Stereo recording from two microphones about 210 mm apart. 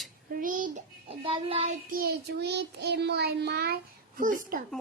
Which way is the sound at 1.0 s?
25° right (ahead or behind).